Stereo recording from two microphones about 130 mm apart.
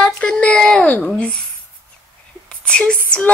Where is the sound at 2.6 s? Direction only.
10° left (ahead or behind).